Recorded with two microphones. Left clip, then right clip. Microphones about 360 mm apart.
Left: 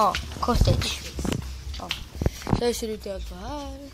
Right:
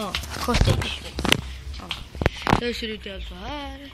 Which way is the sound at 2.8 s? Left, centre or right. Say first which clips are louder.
Even; centre.